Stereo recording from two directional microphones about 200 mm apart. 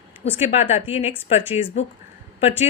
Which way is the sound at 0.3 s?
30° left (ahead or behind).